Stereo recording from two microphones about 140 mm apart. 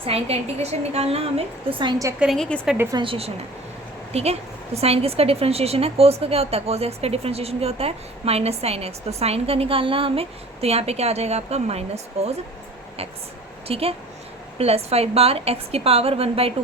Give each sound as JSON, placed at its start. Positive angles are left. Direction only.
{"t": 0.0, "sound": "a woman's voice", "side_deg": -45}
{"t": 2.1, "sound": "a woman's voice", "side_deg": 0}
{"t": 2.9, "sound": "a woman's voice", "side_deg": -40}
{"t": 13.7, "sound": "a woman's voice", "side_deg": -45}